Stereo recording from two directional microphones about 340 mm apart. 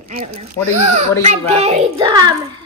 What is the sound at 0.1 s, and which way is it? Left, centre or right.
A child's voice, centre.